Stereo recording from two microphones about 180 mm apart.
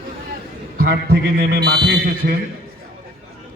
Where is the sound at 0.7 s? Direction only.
60° right (ahead or behind).